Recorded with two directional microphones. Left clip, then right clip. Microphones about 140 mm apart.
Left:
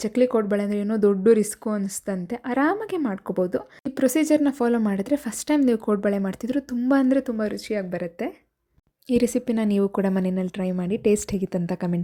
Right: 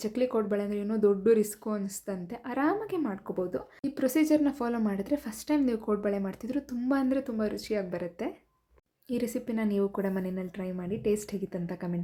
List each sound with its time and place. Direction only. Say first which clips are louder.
0.0 s speech: left 8 dB; 45° left (ahead or behind); by 8.3 s 30° left (ahead or behind)
9.0 s a woman's voice: left 10 dB; 55° left (ahead or behind)